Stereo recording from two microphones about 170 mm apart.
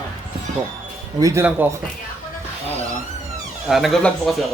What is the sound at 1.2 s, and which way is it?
Speech, 15° right (ahead or behind).